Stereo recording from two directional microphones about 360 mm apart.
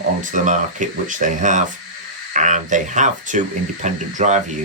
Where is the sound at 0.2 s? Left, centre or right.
Right.